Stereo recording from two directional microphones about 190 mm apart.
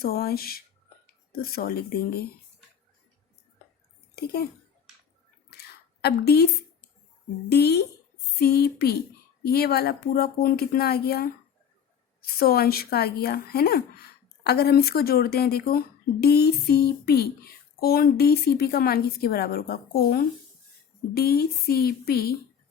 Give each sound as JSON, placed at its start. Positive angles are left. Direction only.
{"t": 0.0, "sound": "speech", "side_deg": 55}
{"t": 4.1, "sound": "speech", "side_deg": 55}
{"t": 5.5, "sound": "a sound", "side_deg": 60}
{"t": 7.5, "sound": "a woman's voice", "side_deg": 55}